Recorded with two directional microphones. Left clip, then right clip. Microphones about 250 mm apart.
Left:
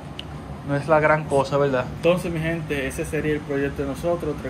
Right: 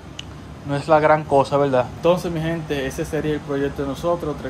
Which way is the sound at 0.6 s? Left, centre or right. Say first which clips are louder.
Right 3 dB; centre.